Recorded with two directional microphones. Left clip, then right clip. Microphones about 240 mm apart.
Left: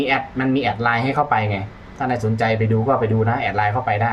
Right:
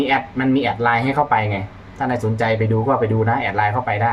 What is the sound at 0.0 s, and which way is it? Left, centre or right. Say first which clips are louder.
Speech: right 1 dB; centre.